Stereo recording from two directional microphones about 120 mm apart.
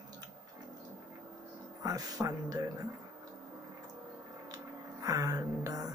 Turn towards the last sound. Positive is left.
turn(degrees=-30)  # may be behind; listen again after turning